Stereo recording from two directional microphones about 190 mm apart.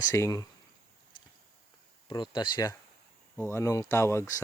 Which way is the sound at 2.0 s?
25° left (ahead or behind).